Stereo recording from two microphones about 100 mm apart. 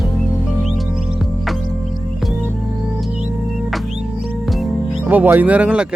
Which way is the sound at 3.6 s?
Centre (ahead or behind).